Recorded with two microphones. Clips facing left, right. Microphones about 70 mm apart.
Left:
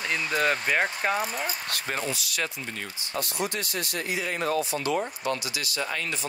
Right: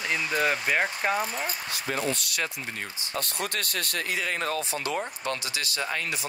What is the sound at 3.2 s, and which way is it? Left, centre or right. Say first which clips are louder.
Speech: left 2 dB; right.